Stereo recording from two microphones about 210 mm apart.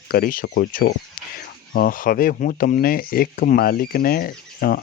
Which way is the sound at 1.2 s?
45° left (ahead or behind).